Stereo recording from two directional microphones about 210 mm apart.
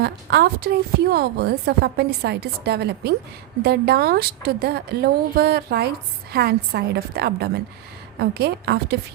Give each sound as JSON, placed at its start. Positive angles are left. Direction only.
{"t": 0.0, "sound": "a woman's voice", "side_deg": -50}